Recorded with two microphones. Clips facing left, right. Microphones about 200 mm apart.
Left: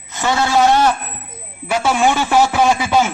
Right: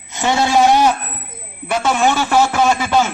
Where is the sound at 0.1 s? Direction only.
20° right (ahead or behind).